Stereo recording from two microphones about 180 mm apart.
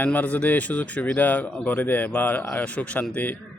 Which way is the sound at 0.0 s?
10° left (ahead or behind).